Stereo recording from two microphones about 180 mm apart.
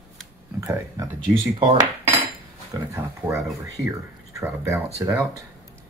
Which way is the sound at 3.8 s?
15° right (ahead or behind).